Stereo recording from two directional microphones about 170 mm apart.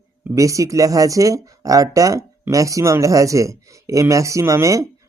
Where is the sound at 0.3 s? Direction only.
20° right (ahead or behind).